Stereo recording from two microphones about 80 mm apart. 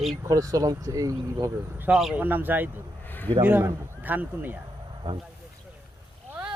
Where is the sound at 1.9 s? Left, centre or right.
Centre.